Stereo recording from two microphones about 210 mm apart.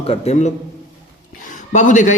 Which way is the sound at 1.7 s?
35° left (ahead or behind).